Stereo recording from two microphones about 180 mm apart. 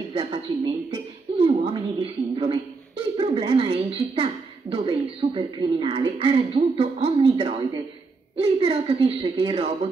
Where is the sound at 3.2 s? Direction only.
30° right (ahead or behind).